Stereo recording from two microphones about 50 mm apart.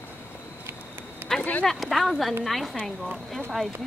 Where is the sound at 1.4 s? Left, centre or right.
Left.